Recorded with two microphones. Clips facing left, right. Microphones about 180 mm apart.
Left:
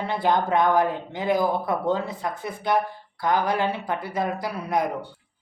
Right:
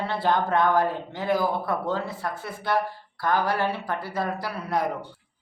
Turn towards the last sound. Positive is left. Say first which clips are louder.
# left 2 dB
turn(degrees=15)  # may be behind; listen again after turning